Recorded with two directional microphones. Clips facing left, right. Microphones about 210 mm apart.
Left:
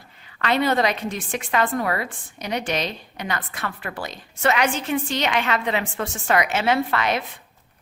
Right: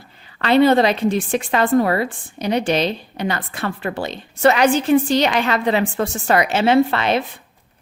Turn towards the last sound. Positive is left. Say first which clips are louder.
# right 6 dB
turn(degrees=-30)  # may be behind; listen again after turning